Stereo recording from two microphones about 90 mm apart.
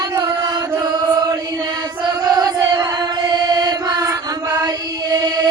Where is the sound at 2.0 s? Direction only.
55° right (ahead or behind).